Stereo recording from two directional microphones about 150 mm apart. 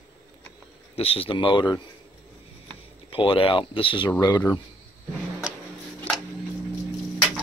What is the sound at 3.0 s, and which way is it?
Speech, 35° left (ahead or behind).